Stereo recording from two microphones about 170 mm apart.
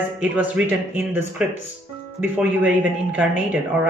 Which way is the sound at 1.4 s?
5° right (ahead or behind).